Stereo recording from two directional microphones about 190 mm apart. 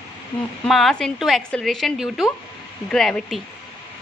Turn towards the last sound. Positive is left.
turn(degrees=0)  # may be behind; listen again after turning